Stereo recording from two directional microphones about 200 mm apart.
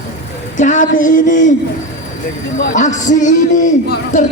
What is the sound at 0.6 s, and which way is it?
Speech, 40° left (ahead or behind).